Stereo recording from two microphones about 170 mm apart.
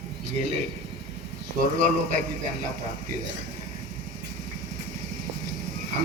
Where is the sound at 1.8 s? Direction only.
50° right (ahead or behind).